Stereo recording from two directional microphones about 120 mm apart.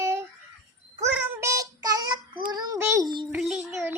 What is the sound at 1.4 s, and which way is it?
A child's voice, 25° right (ahead or behind).